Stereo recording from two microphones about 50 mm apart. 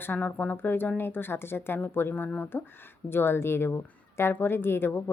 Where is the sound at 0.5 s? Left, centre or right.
Left.